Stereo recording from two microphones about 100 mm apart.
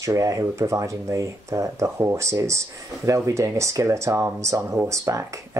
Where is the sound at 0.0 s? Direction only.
35° right (ahead or behind).